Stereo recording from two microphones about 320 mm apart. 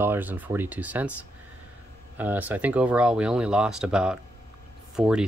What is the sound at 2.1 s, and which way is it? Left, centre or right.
Speech, centre.